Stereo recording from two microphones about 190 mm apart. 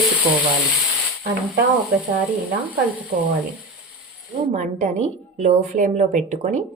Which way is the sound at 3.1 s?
45° right (ahead or behind).